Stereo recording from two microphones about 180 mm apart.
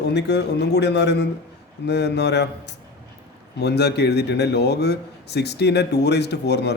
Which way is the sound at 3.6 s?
65° left (ahead or behind).